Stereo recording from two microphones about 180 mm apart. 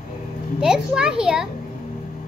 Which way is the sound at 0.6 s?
5° right (ahead or behind).